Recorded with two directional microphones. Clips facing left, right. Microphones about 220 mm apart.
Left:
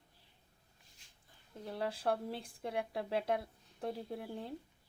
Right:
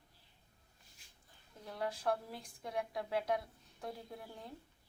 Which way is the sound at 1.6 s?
30° left (ahead or behind).